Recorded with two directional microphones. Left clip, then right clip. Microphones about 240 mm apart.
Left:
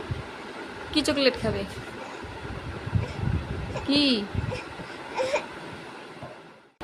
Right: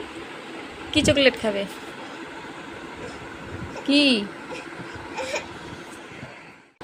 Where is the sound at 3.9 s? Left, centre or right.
Centre.